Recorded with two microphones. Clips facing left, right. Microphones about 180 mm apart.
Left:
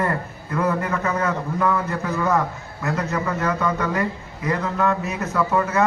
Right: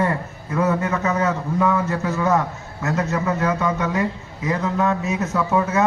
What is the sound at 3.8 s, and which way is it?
Speech, 20° right (ahead or behind).